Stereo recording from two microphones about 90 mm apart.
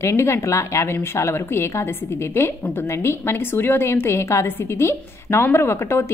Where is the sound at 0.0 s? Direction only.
30° left (ahead or behind).